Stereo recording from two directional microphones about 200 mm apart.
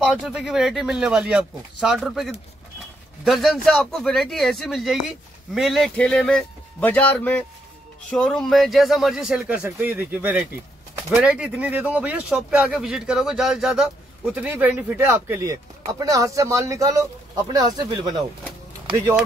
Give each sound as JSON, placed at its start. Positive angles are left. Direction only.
{"t": 0.0, "sound": "speech", "side_deg": -5}